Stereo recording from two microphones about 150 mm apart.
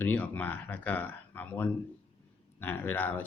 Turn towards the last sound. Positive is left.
turn(degrees=10)  # may be behind; listen again after turning